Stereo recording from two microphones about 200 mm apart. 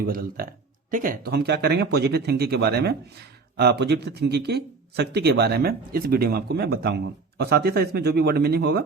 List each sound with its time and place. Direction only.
0.0 s speech: 45° right (ahead or behind)